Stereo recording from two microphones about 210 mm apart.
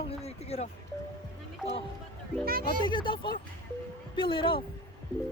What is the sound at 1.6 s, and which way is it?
Speech, 5° right (ahead or behind).